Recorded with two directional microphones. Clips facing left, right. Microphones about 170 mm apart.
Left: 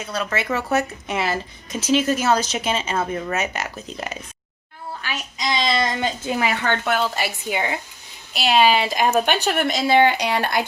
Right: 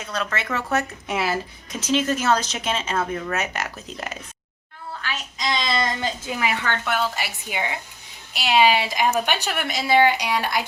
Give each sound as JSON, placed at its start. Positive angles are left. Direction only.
{"t": 0.0, "sound": "speech", "side_deg": 10}
{"t": 1.0, "sound": "a woman's voice", "side_deg": -5}
{"t": 5.0, "sound": "a sound", "side_deg": 15}
{"t": 6.4, "sound": "speech", "side_deg": 35}